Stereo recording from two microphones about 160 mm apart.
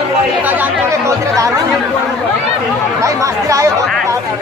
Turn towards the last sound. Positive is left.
turn(degrees=-20)  # may be behind; listen again after turning